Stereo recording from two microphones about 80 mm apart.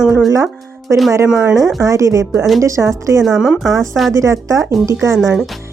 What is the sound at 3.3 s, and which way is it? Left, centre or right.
Speech, centre.